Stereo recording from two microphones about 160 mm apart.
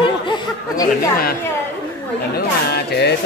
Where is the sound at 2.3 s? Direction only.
80° left.